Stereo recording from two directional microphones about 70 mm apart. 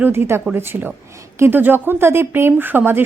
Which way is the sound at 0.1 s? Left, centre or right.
Right.